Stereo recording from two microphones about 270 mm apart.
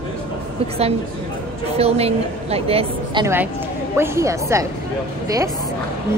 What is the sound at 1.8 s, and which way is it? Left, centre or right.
A woman's voice, right.